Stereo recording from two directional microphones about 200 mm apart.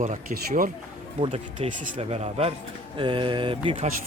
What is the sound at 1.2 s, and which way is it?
Speech, 30° right (ahead or behind).